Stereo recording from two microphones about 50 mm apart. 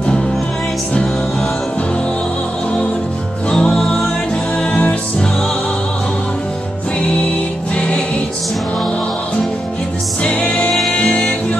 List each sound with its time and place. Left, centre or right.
3.4 s music: centre
7.7 s music: left
10.2 s music: left